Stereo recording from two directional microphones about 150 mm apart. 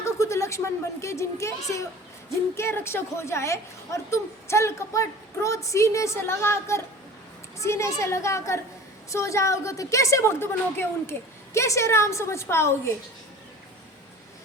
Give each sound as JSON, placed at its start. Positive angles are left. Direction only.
{"t": 0.0, "sound": "a woman's voice", "side_deg": 20}